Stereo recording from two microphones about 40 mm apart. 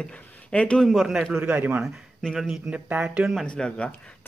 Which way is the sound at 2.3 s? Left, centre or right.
Centre.